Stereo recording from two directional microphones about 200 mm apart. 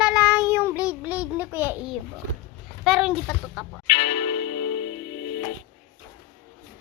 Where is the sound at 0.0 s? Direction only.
5° right (ahead or behind).